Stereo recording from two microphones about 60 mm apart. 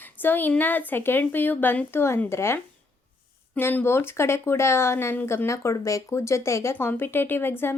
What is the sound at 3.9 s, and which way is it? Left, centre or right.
Speech, left.